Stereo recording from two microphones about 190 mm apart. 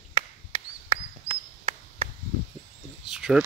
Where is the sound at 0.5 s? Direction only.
25° right (ahead or behind).